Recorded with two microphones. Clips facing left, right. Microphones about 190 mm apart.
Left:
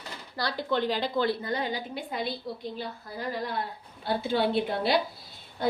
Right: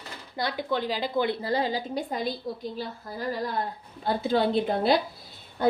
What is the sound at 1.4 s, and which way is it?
A woman's voice, 30° right (ahead or behind).